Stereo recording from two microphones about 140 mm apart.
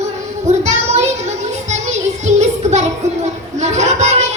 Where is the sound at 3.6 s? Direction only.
55° right (ahead or behind).